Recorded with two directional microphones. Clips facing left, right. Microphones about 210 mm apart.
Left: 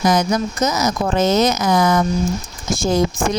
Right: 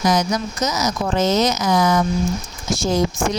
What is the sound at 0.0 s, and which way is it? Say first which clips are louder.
Speech: left 2 dB; 55° left (ahead or behind).